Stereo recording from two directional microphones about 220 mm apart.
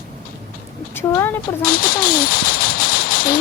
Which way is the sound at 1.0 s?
10° left (ahead or behind).